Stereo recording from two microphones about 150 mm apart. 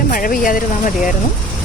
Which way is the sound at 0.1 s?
65° left (ahead or behind).